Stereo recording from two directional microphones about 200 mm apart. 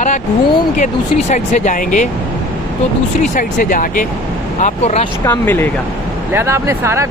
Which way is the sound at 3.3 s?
40° left (ahead or behind).